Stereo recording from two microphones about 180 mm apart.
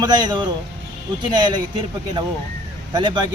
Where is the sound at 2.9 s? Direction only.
25° right (ahead or behind).